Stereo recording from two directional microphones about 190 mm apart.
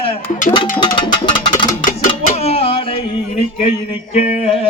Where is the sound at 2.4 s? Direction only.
30° left (ahead or behind).